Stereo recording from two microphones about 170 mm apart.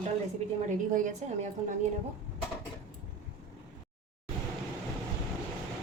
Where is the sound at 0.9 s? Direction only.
50° right (ahead or behind).